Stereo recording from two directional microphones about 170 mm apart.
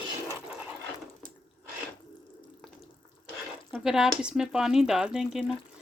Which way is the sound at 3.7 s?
5° right (ahead or behind).